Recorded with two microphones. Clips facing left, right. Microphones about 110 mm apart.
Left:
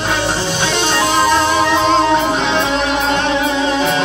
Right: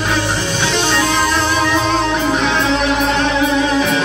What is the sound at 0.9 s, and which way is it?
Music, 25° left (ahead or behind).